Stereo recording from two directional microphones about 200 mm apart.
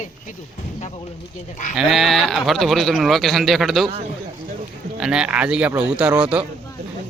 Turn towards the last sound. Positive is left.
turn(degrees=-5)  # may be behind; listen again after turning